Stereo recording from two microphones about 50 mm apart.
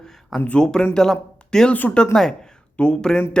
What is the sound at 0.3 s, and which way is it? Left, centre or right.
Speech, left.